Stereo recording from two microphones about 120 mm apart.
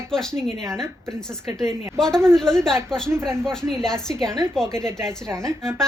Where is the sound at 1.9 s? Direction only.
5° left (ahead or behind).